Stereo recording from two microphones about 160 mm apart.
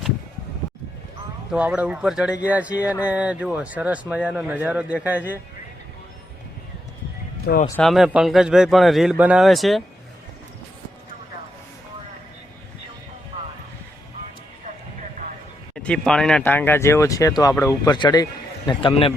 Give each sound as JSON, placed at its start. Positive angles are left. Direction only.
{"t": 1.5, "sound": "speech", "side_deg": -10}
{"t": 7.4, "sound": "speech", "side_deg": 65}
{"t": 7.8, "sound": "speech", "side_deg": 0}
{"t": 15.7, "sound": "speech", "side_deg": 5}